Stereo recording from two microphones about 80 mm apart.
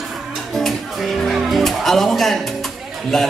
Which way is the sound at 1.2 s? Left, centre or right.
Centre.